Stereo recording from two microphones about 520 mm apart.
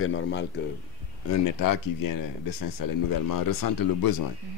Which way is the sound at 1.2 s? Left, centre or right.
Left.